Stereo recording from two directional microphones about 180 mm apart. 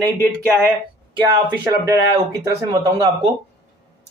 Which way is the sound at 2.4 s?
20° right (ahead or behind).